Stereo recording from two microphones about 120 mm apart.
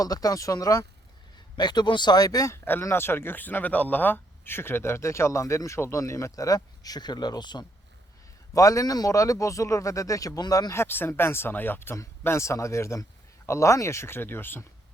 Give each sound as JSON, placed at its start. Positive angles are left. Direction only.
{"t": 0.0, "sound": "speech", "side_deg": 30}
{"t": 2.6, "sound": "speech", "side_deg": 20}